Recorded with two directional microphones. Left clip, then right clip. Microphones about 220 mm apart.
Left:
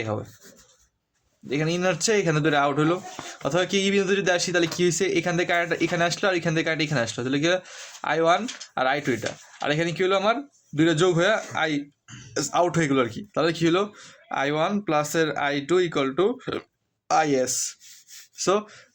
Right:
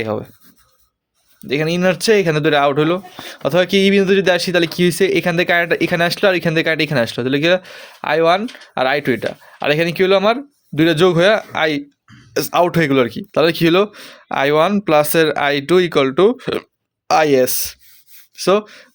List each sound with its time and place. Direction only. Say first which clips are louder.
0.0 s speech: right 8 dB; 40° right (ahead or behind)
1.5 s speech: right 8 dB; 40° right (ahead or behind)